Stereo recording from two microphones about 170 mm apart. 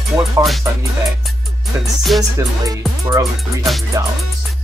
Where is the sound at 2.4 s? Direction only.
20° right (ahead or behind).